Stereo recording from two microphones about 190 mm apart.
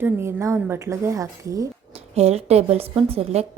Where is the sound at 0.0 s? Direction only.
15° right (ahead or behind).